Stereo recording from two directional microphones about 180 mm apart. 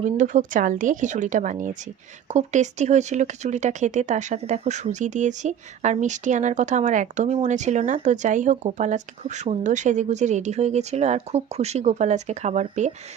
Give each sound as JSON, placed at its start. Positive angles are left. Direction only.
{"t": 0.0, "sound": "a woman's voice", "side_deg": -45}